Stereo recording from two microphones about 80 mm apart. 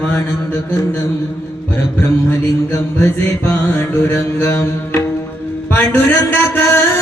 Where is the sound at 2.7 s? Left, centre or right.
Left.